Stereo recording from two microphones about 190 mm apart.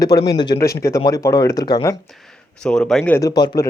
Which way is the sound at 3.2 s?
20° left (ahead or behind).